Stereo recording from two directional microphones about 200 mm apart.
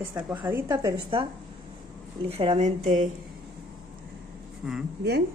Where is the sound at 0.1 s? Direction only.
10° right (ahead or behind).